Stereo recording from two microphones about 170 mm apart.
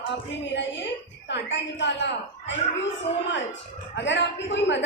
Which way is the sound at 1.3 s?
90° left.